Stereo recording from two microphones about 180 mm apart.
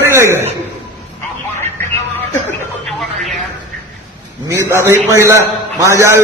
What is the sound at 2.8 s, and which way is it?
Music, centre (ahead or behind).